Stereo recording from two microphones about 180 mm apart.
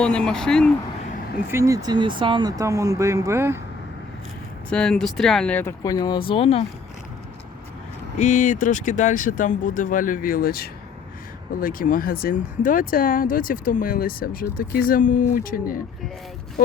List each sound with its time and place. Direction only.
0.0 s speech: 5° left (ahead or behind)
1.5 s speech: 15° right (ahead or behind)
4.7 s speech: 5° left (ahead or behind); by 6.7 s 30° left (ahead or behind)
8.2 s speech: 45° left (ahead or behind)